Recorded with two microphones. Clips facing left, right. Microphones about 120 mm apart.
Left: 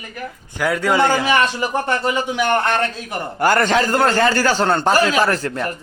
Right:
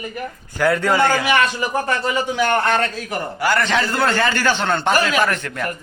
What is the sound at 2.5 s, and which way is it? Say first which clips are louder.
Speech: left 1 dB; 5° right (ahead or behind).